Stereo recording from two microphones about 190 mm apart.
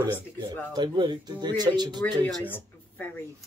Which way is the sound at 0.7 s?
25° right (ahead or behind).